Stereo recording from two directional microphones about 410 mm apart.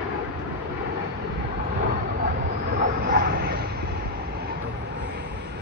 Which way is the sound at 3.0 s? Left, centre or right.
Right.